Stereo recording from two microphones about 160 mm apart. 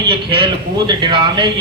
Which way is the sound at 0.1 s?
30° right (ahead or behind).